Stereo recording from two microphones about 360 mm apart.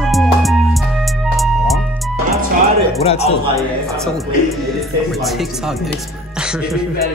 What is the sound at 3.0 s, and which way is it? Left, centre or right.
Speech, centre.